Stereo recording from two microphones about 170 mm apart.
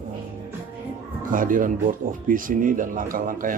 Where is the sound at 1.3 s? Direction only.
55° right (ahead or behind).